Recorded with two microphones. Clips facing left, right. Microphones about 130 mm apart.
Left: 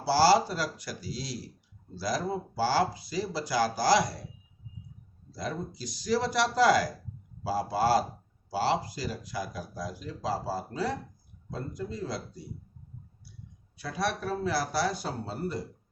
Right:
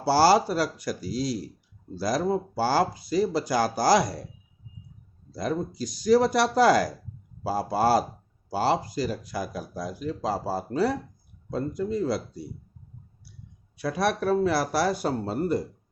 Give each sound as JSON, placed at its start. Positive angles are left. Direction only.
{"t": 0.1, "sound": "speech", "side_deg": -55}
{"t": 5.4, "sound": "speech", "side_deg": -50}
{"t": 13.7, "sound": "speech", "side_deg": -65}